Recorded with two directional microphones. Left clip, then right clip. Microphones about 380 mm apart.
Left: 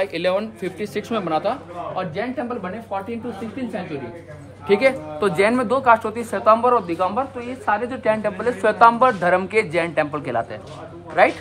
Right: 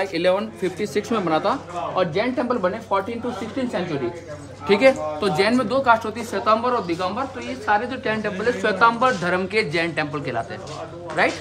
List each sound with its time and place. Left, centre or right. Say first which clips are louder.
0.0 s speech: right 1 dB; centre
4.6 s speech: right 1 dB; centre